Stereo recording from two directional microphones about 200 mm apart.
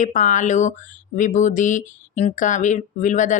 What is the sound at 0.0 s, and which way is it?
Speech, 40° left (ahead or behind).